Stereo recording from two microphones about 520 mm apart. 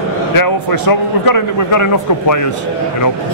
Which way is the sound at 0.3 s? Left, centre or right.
Left.